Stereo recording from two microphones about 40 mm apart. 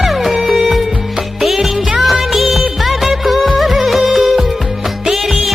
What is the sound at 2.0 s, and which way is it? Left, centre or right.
Music of bollywood, centre.